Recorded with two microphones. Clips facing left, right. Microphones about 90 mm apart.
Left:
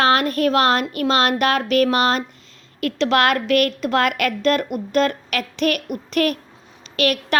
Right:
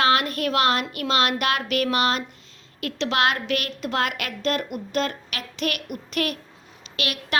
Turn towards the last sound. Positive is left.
turn(degrees=45)  # may be behind; listen again after turning